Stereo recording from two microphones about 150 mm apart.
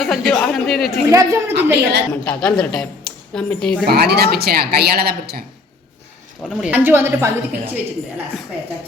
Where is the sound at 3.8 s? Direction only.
90° right.